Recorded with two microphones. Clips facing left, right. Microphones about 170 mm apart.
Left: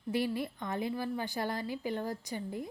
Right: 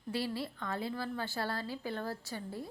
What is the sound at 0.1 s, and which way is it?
A woman's voice, 15° left (ahead or behind).